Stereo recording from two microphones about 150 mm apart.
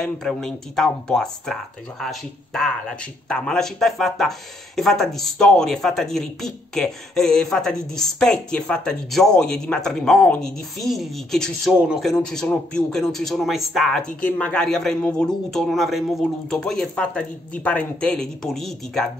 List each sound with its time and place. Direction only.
0.0 s speech: 5° left (ahead or behind)